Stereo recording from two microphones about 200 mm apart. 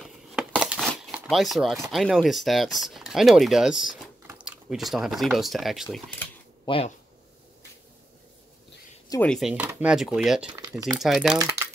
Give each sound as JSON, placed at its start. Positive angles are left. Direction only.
{"t": 0.0, "sound": "a sound", "side_deg": 0}
{"t": 1.9, "sound": "speech", "side_deg": 0}
{"t": 6.6, "sound": "speech", "side_deg": 25}
{"t": 9.2, "sound": "speech", "side_deg": 0}